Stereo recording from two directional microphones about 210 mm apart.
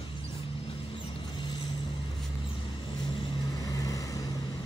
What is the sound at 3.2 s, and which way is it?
Vehicle, 15° left (ahead or behind).